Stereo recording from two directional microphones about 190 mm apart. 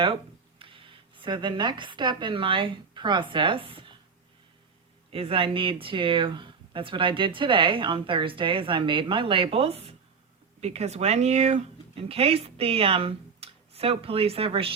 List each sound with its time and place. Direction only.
0.6 s speech: 25° right (ahead or behind)
5.1 s speech: 30° right (ahead or behind)